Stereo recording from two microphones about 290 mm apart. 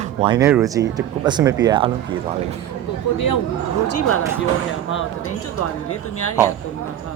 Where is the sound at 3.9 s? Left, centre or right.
Left.